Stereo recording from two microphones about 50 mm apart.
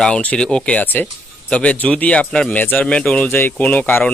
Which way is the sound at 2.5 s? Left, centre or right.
Left.